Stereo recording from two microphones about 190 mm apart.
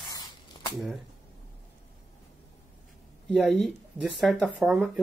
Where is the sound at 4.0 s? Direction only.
Centre (ahead or behind).